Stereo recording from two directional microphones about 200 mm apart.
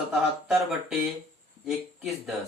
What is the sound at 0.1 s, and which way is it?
Speech, centre (ahead or behind).